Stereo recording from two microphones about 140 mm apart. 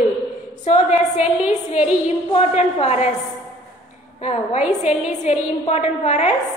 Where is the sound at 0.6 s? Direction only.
50° left (ahead or behind).